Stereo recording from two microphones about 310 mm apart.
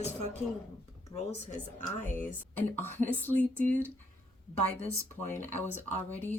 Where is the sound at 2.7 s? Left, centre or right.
Centre.